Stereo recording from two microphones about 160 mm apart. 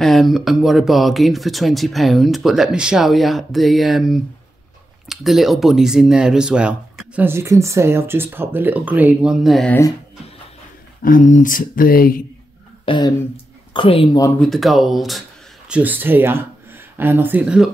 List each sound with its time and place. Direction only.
0.0 s speech: centre (ahead or behind)
11.0 s speech: 60° left (ahead or behind)
12.8 s speech: 30° left (ahead or behind)
14.4 s speech: centre (ahead or behind)
15.7 s speech: 10° right (ahead or behind)